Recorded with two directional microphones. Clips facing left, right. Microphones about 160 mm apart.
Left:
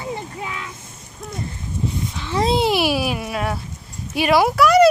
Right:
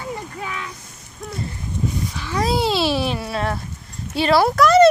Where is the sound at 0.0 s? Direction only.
25° left (ahead or behind).